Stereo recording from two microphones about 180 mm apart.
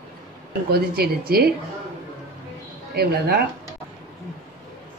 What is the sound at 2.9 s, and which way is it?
Speech, 60° right (ahead or behind).